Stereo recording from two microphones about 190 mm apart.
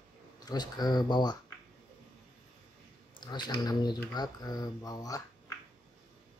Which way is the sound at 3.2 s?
25° left (ahead or behind).